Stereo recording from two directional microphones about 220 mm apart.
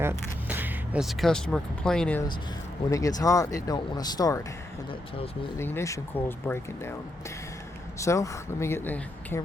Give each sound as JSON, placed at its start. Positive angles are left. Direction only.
{"t": 0.0, "sound": "speech", "side_deg": -10}
{"t": 2.9, "sound": "speech", "side_deg": 15}
{"t": 5.5, "sound": "speech", "side_deg": 10}
{"t": 7.9, "sound": "speech", "side_deg": 15}